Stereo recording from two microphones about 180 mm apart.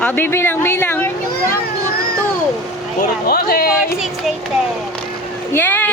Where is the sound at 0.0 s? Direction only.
10° left (ahead or behind).